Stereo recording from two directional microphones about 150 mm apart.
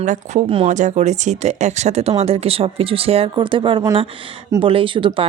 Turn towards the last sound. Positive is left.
turn(degrees=-35)  # may be behind; listen again after turning